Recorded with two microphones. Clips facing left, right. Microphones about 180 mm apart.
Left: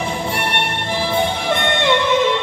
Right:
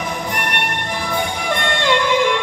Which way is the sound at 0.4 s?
30° left (ahead or behind).